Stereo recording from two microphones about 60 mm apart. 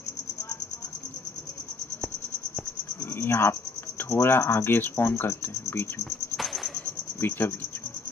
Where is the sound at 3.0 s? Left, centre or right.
Left.